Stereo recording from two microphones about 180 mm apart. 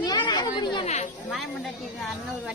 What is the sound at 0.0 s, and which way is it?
Chatter, 25° left (ahead or behind).